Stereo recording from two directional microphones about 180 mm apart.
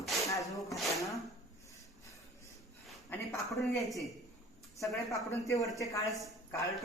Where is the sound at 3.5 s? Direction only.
Centre (ahead or behind).